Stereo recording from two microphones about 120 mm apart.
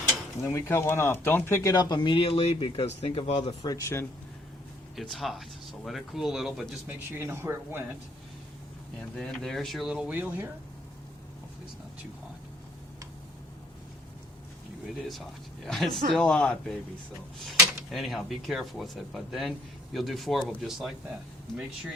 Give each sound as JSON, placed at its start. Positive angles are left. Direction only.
{"t": 0.4, "sound": "speech", "side_deg": 25}
{"t": 1.7, "sound": "speech", "side_deg": 35}
{"t": 3.6, "sound": "speech", "side_deg": 30}
{"t": 4.9, "sound": "speech", "side_deg": 0}
{"t": 6.8, "sound": "speech", "side_deg": -20}
{"t": 9.1, "sound": "speech", "side_deg": 5}
{"t": 15.6, "sound": "speech", "side_deg": 5}